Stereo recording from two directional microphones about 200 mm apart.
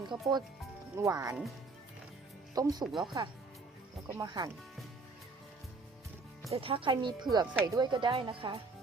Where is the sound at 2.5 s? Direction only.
20° right (ahead or behind).